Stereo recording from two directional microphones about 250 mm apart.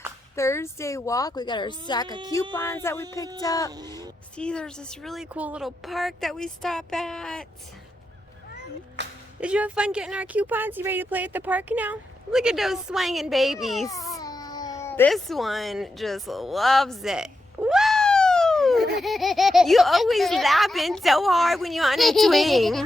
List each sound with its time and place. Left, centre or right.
0.3 s speech: centre
2.0 s speech: centre
2.3 s speech: centre
4.4 s speech: centre
9.0 s music: right
9.4 s speech: centre
14.1 s cat: centre
19.0 s speech: centre